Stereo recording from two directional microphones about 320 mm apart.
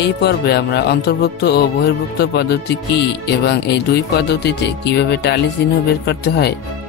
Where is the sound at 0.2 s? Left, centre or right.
Left.